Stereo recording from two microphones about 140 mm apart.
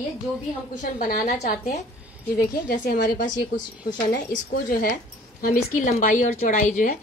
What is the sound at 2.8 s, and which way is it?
Speech, 90° left.